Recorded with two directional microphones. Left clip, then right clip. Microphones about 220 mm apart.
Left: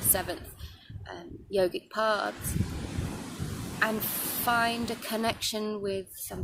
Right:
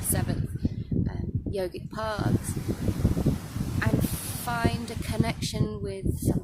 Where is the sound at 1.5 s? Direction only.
10° left (ahead or behind).